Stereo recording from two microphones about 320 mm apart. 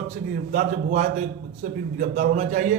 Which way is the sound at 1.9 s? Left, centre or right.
Right.